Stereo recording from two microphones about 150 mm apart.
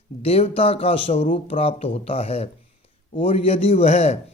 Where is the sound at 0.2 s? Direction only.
40° left (ahead or behind).